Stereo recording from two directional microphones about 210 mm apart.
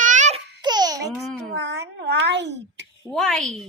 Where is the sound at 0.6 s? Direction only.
20° right (ahead or behind).